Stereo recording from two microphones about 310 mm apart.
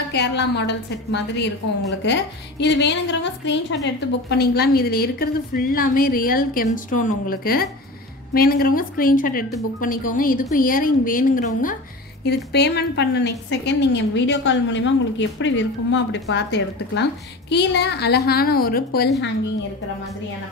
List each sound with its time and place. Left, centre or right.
0.1 s a woman's voice: left